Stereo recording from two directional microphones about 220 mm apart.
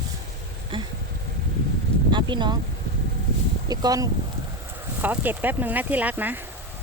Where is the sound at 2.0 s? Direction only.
20° right (ahead or behind).